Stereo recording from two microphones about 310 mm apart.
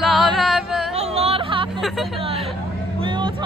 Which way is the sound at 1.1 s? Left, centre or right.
Centre.